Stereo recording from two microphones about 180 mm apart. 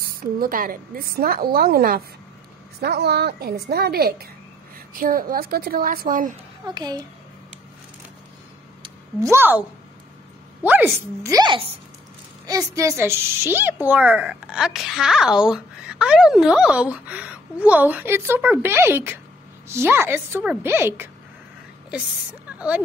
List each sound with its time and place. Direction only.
0.0 s a woman's voice: 55° right (ahead or behind)
6.7 s a child's voice: 20° right (ahead or behind)
9.2 s a woman's voice: 10° right (ahead or behind)